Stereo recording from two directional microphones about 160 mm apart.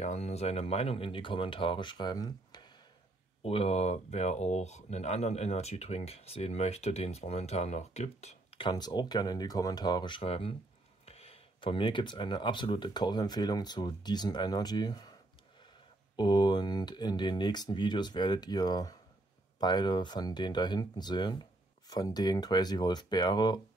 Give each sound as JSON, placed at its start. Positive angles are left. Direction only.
{"t": 0.0, "sound": "speech", "side_deg": 45}
{"t": 3.4, "sound": "speech", "side_deg": 40}
{"t": 16.2, "sound": "speech", "side_deg": 25}